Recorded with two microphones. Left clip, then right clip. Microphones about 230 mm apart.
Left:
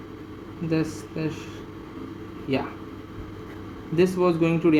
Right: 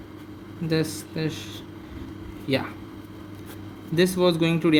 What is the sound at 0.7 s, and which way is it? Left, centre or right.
Speech, right.